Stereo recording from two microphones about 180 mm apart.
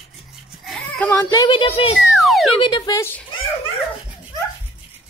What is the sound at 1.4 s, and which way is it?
Speech, 30° left (ahead or behind).